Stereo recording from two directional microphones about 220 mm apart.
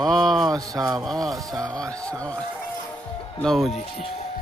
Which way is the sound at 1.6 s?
5° left (ahead or behind).